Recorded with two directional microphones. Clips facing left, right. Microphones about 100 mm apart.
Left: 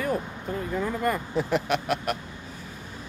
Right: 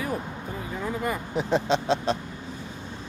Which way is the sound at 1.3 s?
20° right (ahead or behind).